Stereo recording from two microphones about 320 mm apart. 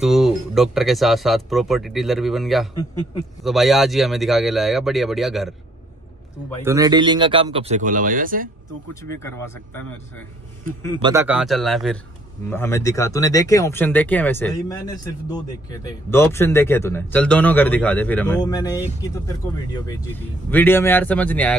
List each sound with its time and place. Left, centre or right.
0.0 s speech: centre
6.6 s speech: centre; by 8.5 s right
9.1 s speech: centre
11.0 s speech: centre
20.4 s speech: centre